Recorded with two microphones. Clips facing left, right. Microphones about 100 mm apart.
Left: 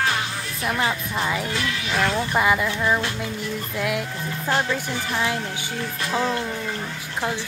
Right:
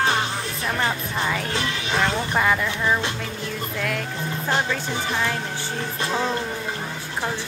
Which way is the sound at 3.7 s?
10° left (ahead or behind).